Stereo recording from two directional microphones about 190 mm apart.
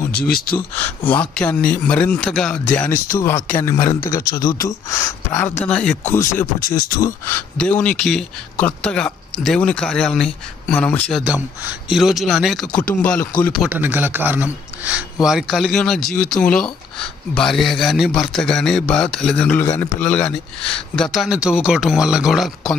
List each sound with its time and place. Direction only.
0.2 s speech: 50° left (ahead or behind)
0.6 s speech: 10° left (ahead or behind)
7.5 s speech: 5° left (ahead or behind)
11.2 s speech: 5° right (ahead or behind)
13.7 s speech: 10° right (ahead or behind)